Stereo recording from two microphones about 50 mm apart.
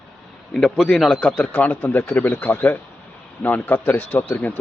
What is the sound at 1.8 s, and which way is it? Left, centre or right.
A man's voice, left.